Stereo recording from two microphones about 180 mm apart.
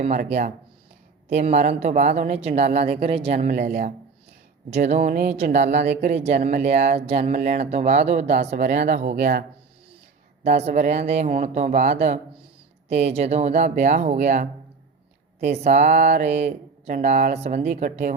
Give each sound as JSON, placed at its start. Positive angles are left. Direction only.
{"t": 0.0, "sound": "speech", "side_deg": -40}
{"t": 3.4, "sound": "a woman's voice", "side_deg": -50}
{"t": 9.0, "sound": "speech", "side_deg": -60}
{"t": 10.4, "sound": "speech", "side_deg": -35}